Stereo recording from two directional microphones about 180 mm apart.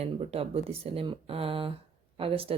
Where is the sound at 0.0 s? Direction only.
35° right (ahead or behind).